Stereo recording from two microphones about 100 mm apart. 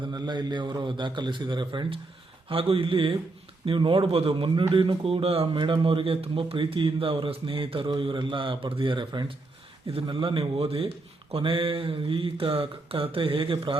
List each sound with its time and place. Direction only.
0.0 s a man's voice: 45° right (ahead or behind)
2.5 s speech: 70° right (ahead or behind)
5.5 s speech: 55° right (ahead or behind)